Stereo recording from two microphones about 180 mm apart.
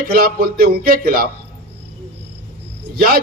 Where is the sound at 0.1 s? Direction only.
55° right (ahead or behind).